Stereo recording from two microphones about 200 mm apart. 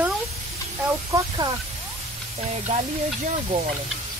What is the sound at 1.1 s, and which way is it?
Speech, 20° right (ahead or behind).